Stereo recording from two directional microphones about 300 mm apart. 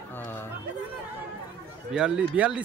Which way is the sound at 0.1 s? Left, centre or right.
Centre.